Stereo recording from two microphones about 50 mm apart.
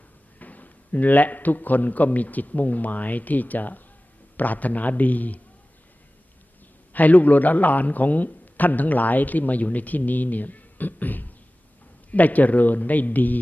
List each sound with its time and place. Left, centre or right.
0.3 s a man's voice: left
6.9 s a man's voice: left